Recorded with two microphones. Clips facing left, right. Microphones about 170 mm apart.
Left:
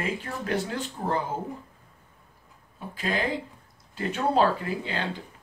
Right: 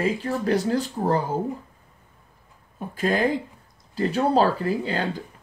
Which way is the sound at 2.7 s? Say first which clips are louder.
Right 6 dB; 45° right (ahead or behind).